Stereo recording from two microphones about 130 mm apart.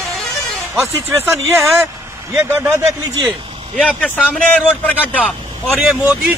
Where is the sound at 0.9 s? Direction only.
20° right (ahead or behind).